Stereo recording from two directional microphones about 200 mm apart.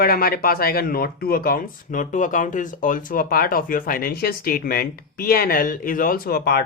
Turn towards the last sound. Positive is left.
turn(degrees=50)  # may be behind; listen again after turning